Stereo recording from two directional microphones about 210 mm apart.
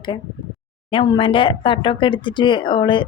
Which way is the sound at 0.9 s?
25° left (ahead or behind).